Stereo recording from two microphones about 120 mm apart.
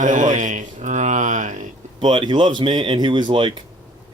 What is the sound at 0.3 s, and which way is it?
Music, 90° right.